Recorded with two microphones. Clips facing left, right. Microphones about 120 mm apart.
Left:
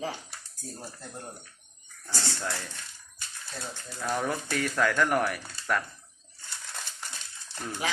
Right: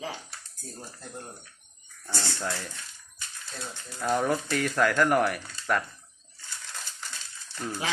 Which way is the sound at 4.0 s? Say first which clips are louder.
Right 4 dB; 10° right (ahead or behind).